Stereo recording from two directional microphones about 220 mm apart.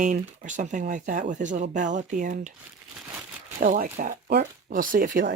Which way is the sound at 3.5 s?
40° right (ahead or behind).